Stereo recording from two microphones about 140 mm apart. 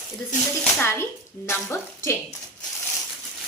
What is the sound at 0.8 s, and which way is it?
A child's voice, 15° left (ahead or behind).